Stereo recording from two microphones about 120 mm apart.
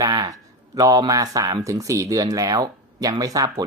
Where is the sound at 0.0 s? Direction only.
30° right (ahead or behind).